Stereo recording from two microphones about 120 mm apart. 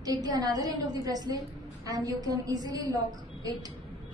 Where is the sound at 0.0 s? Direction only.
35° right (ahead or behind).